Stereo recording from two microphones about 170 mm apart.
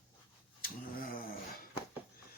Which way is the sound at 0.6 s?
60° left (ahead or behind).